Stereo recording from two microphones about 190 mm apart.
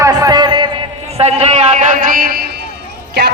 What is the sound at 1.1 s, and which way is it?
A man's voice, 35° right (ahead or behind).